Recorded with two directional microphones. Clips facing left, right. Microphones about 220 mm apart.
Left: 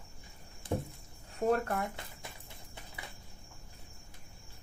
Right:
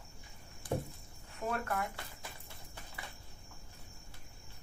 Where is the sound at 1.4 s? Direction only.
40° left (ahead or behind).